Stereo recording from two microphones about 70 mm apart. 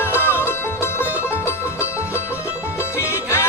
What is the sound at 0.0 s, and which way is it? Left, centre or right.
Music, left.